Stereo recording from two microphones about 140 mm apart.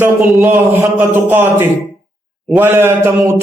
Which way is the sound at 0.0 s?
15° right (ahead or behind).